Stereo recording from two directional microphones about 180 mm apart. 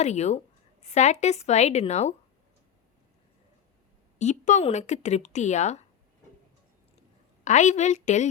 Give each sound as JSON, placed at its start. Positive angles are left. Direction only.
{"t": 0.0, "sound": "speech", "side_deg": 40}
{"t": 4.2, "sound": "speech", "side_deg": 40}
{"t": 7.4, "sound": "speech", "side_deg": 40}